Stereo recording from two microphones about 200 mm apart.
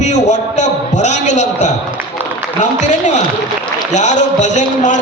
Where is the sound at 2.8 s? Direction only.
35° left (ahead or behind).